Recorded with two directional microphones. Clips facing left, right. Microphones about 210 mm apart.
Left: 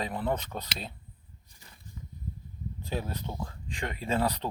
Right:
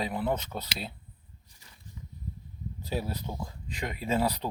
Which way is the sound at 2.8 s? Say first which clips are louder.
Right 1 dB; 10° right (ahead or behind).